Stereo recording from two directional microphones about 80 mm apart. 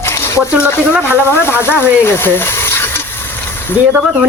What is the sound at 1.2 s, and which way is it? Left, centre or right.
Speech, left.